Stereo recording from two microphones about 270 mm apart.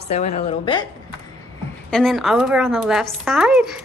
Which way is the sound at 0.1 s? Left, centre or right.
Left.